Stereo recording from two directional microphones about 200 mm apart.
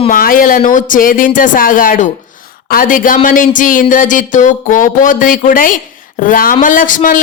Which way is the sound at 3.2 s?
40° left (ahead or behind).